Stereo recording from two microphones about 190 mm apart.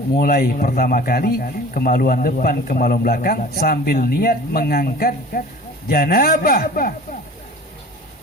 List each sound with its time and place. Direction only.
0.2 s a man's voice: 50° left (ahead or behind)